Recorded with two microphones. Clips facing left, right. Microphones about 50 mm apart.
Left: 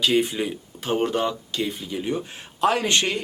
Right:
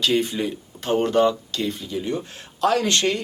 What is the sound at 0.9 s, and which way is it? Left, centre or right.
Speech, centre.